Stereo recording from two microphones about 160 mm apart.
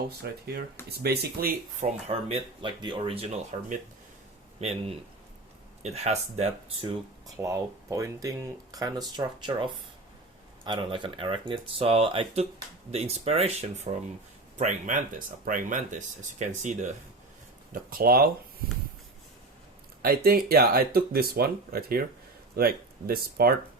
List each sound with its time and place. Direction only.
0.2 s speech: 80° right
0.9 s speech: 90° right
1.8 s speech: 40° right (ahead or behind)
4.6 s speech: 40° right (ahead or behind)
5.8 s speech: 45° right (ahead or behind)
7.3 s speech: 20° right (ahead or behind); by 16.9 s 50° right (ahead or behind)
17.7 s speech: 65° right (ahead or behind)
20.0 s speech: 70° right (ahead or behind)